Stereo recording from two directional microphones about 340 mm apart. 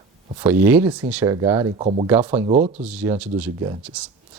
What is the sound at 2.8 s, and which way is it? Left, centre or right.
Speech, centre.